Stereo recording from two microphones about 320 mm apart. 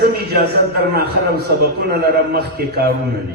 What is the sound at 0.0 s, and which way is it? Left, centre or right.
A man's voice, right.